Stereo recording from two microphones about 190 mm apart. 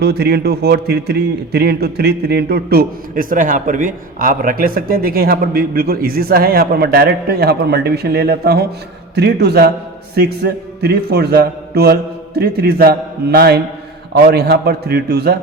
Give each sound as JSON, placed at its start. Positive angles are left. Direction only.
{"t": 0.0, "sound": "a man's voice", "side_deg": -60}